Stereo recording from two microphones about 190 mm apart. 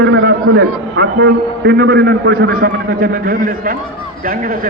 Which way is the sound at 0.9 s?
60° right (ahead or behind).